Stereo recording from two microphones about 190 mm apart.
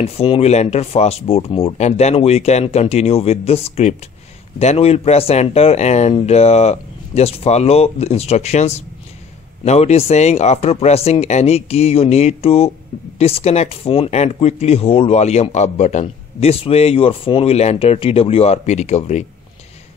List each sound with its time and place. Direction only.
0.0 s speech: 30° left (ahead or behind)